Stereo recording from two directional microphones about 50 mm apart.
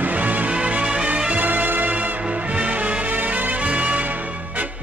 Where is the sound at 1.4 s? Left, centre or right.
Right.